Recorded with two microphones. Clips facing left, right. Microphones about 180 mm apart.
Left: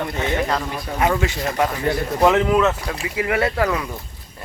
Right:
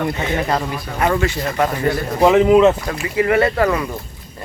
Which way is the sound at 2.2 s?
10° right (ahead or behind).